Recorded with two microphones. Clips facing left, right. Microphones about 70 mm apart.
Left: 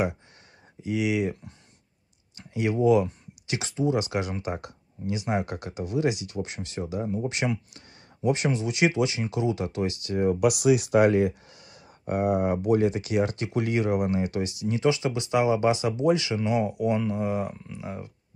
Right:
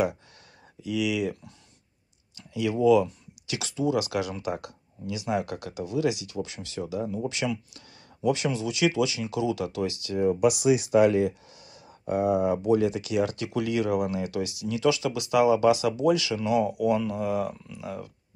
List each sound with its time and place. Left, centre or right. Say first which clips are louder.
0.8 s speech: left 1 dB; left